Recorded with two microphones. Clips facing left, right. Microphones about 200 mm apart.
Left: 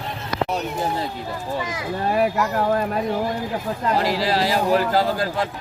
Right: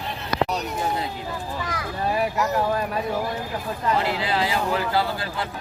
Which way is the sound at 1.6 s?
20° left (ahead or behind).